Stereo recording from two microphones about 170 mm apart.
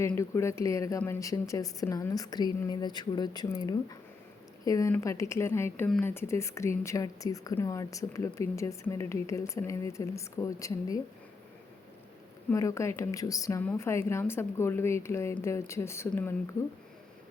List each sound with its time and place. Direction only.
0.0 s speech: 15° left (ahead or behind)
12.5 s speech: 20° left (ahead or behind)